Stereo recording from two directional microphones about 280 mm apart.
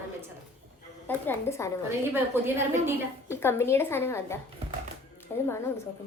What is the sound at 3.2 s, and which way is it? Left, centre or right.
A woman's voice, centre.